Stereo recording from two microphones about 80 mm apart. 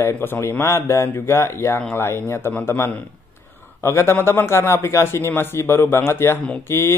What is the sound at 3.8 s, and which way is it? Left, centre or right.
A man's voice, left.